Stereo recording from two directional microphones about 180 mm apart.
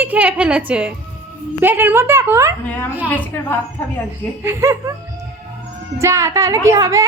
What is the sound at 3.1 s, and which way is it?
Speech, 10° left (ahead or behind).